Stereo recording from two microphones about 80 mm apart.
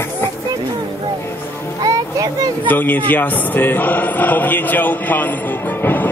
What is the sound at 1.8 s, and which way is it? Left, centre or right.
Music, right.